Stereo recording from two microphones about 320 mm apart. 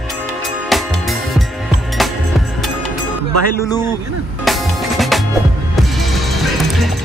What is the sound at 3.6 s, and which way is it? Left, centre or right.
Speech, centre.